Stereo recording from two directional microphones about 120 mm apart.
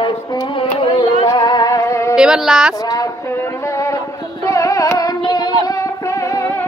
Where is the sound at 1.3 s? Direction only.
35° left (ahead or behind).